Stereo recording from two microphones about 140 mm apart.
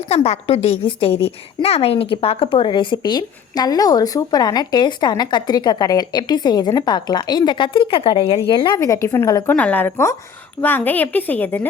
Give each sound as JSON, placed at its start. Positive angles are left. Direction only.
{"t": 0.1, "sound": "a woman's voice", "side_deg": 50}
{"t": 8.8, "sound": "a woman's voice", "side_deg": 20}